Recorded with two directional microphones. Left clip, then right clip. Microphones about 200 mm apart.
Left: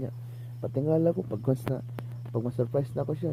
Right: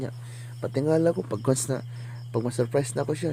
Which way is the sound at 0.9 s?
10° right (ahead or behind).